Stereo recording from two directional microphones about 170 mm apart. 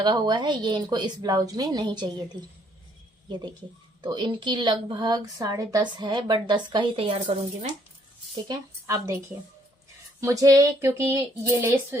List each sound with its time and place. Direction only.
0.0 s a woman's voice: 25° right (ahead or behind)
4.0 s a woman's voice: 25° right (ahead or behind)
8.4 s a woman's voice: 20° right (ahead or behind)
10.2 s speech: 20° right (ahead or behind)